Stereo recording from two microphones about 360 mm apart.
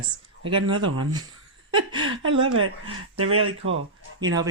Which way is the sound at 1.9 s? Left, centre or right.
Right.